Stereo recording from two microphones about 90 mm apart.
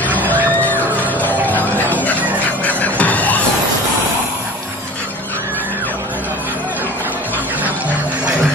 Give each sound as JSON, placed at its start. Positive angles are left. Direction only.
{"t": 0.7, "sound": "music", "side_deg": 20}